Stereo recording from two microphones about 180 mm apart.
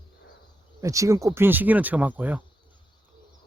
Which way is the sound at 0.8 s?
20° right (ahead or behind).